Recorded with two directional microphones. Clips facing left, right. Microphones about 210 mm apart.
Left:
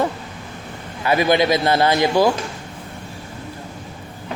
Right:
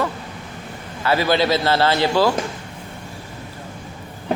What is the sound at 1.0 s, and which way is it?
Speech, 15° left (ahead or behind).